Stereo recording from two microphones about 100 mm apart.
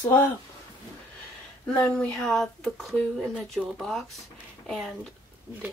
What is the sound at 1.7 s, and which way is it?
Speech, 15° left (ahead or behind).